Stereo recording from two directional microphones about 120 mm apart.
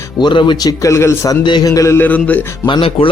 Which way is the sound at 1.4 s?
35° left (ahead or behind).